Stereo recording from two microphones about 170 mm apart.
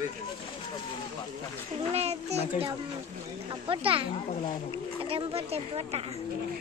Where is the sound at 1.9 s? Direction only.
40° right (ahead or behind).